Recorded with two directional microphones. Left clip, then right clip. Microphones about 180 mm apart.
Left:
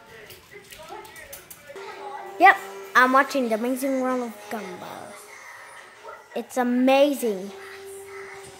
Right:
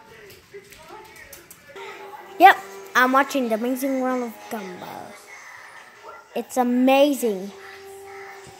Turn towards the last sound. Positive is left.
turn(degrees=-15)  # may be behind; listen again after turning